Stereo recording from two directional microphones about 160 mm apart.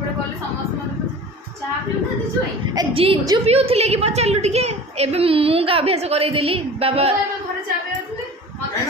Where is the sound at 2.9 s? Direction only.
35° right (ahead or behind).